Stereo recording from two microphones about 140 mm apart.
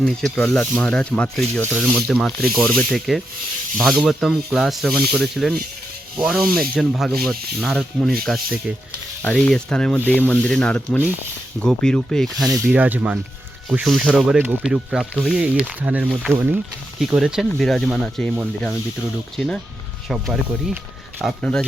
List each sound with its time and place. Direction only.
0.0 s speech: 5° left (ahead or behind)
12.5 s speech: 20° right (ahead or behind)
12.7 s speech: 10° right (ahead or behind)
19.4 s speech: 10° left (ahead or behind)
20.1 s speech: 5° right (ahead or behind)